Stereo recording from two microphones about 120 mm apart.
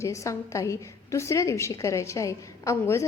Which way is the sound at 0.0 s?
25° left (ahead or behind).